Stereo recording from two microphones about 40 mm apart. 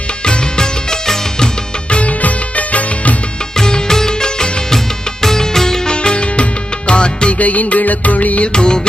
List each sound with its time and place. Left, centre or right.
0.3 s music: centre
1.9 s music: left
3.5 s music: centre
7.3 s music: left
8.5 s music: left